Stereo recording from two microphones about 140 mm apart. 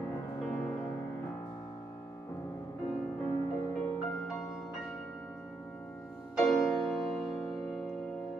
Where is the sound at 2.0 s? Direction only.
20° left (ahead or behind).